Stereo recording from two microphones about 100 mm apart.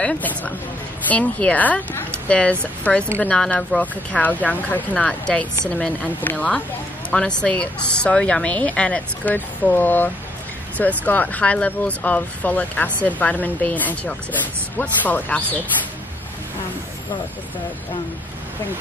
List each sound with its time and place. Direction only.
0.0 s speech: 15° left (ahead or behind)